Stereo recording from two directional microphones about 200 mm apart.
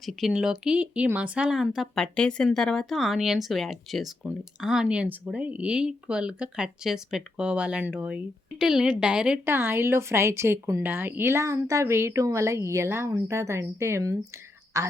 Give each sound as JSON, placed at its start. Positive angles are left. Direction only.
{"t": 0.0, "sound": "speech", "side_deg": 0}